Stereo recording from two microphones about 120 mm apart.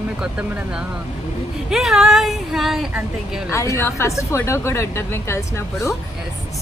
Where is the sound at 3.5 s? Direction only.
25° left (ahead or behind).